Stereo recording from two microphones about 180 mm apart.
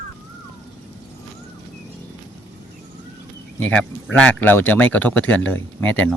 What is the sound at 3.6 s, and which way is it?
A man's voice, 10° left (ahead or behind).